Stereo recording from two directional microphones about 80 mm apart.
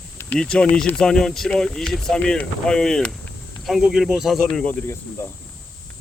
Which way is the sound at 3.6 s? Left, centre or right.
Centre.